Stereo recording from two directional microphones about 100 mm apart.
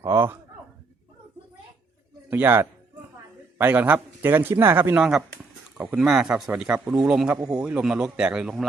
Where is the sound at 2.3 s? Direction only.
20° right (ahead or behind).